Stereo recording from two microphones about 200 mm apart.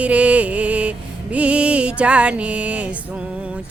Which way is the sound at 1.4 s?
5° right (ahead or behind).